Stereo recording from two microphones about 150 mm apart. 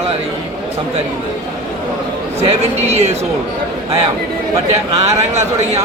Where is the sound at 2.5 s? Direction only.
45° right (ahead or behind).